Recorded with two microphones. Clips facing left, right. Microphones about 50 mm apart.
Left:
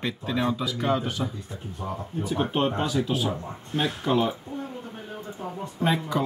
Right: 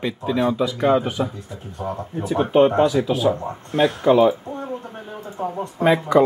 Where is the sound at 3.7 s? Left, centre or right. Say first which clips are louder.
Right 9 dB; right.